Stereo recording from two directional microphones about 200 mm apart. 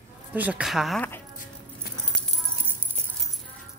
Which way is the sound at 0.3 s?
5° right (ahead or behind).